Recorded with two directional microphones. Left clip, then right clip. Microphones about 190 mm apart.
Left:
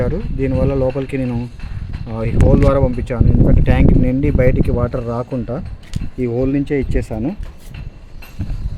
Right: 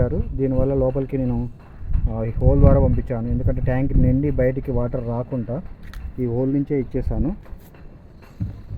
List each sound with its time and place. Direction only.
0.0 s speech: 20° left (ahead or behind)
6.5 s speech: 15° left (ahead or behind)